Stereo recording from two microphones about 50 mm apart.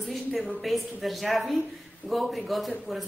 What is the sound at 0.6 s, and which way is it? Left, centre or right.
A woman's voice, centre.